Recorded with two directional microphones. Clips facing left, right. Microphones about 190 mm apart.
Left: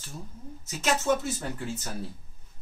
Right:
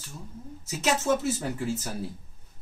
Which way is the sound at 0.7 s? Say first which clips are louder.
Right 1 dB; 5° right (ahead or behind).